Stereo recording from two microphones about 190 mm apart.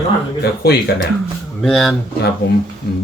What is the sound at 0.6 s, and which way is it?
Speech, 55° left (ahead or behind).